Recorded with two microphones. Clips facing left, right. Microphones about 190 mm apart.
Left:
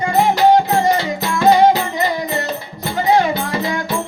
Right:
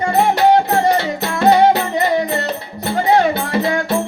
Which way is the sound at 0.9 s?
60° right (ahead or behind).